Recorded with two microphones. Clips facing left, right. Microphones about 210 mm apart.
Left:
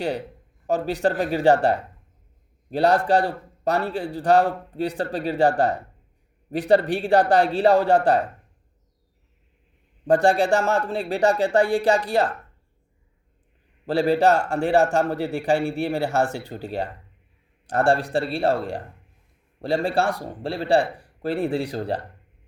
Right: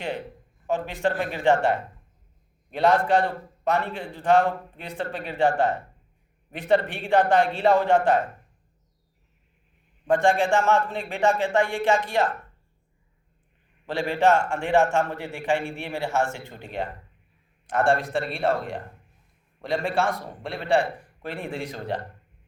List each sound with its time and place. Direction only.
0.7 s a man's voice: 40° left (ahead or behind)
10.1 s a man's voice: 35° left (ahead or behind)
13.8 s a man's voice: 35° left (ahead or behind)